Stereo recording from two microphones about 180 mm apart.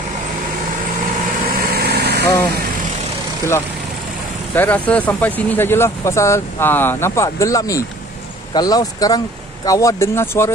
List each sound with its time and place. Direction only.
1.5 s vehicle: 60° right (ahead or behind)
4.6 s speech: 10° left (ahead or behind)